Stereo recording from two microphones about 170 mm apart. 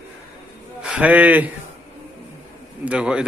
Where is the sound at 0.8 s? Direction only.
5° right (ahead or behind).